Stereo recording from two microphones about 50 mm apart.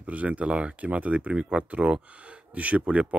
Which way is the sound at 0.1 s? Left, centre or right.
Right.